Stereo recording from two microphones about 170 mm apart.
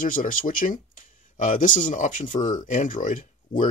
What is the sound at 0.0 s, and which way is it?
Speech, 55° left (ahead or behind).